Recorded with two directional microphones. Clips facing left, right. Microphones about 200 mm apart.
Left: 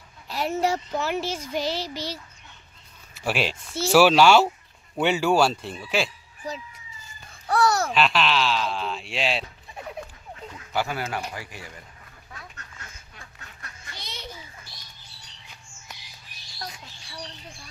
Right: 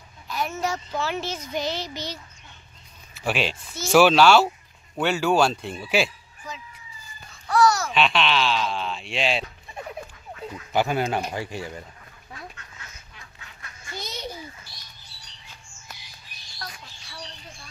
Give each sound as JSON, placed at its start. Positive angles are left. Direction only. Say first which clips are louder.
{"t": 0.3, "sound": "a child's voice", "louder": "left 3 dB", "side_deg": 30}
{"t": 0.9, "sound": "a child's voice", "louder": "left 1 dB", "side_deg": 10}
{"t": 3.3, "sound": "a child's voice", "louder": "even", "side_deg": 10}
{"t": 7.5, "sound": "babbling", "louder": "right 2 dB", "side_deg": 60}
{"t": 7.9, "sound": "speech", "louder": "even", "side_deg": 0}
{"t": 10.7, "sound": "speech", "louder": "right 5 dB", "side_deg": -20}
{"t": 15.9, "sound": "squawk", "louder": "even", "side_deg": 20}
{"t": 16.5, "sound": "a sound", "louder": "left 2 dB", "side_deg": 20}